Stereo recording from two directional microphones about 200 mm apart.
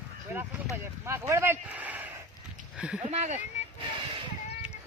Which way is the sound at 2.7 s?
5° right (ahead or behind).